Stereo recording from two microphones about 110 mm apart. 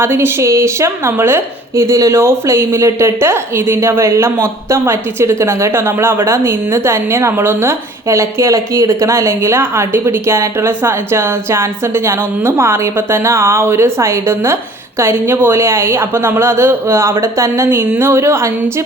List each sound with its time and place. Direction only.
0.0 s a woman's voice: 20° right (ahead or behind)